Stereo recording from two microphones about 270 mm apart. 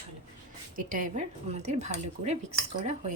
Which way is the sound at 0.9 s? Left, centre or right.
Right.